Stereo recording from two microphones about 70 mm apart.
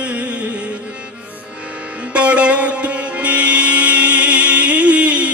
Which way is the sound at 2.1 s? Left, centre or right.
Centre.